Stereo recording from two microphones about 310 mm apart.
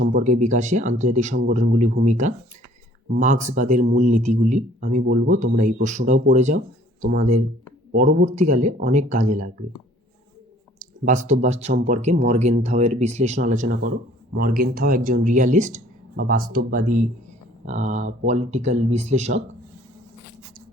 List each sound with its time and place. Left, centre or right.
0.0 s speech: right
10.8 s speech: right